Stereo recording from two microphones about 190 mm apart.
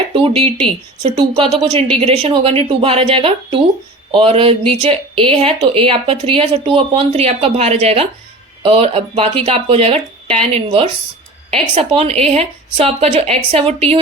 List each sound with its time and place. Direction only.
0.1 s speech: 30° right (ahead or behind)